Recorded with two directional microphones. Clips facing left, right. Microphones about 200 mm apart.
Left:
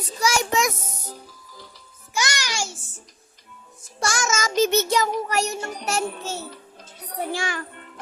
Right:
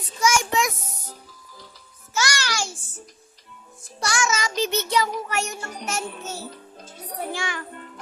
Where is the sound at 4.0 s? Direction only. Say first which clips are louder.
Even; 45° left (ahead or behind).